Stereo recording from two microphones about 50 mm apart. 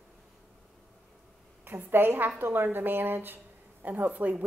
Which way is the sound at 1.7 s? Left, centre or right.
Right.